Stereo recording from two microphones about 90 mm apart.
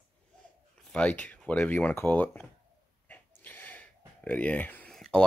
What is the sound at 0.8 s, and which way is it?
Speech, 10° left (ahead or behind).